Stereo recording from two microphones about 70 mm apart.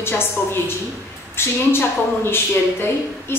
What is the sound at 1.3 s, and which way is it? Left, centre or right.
A woman's voice, left.